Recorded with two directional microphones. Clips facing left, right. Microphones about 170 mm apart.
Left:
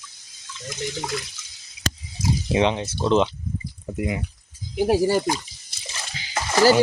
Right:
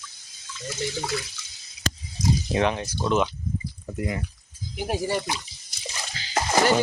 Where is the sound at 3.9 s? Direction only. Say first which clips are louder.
Left 3 dB; 15° left (ahead or behind).